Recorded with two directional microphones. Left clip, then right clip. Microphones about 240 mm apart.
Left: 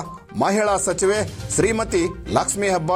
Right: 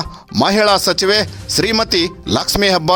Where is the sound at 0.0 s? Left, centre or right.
Right.